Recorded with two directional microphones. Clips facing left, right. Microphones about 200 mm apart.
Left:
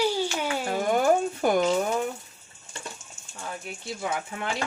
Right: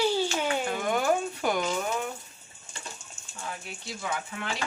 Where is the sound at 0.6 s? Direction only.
40° left (ahead or behind).